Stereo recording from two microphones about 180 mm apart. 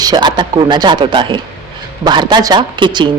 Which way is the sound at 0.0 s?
25° right (ahead or behind).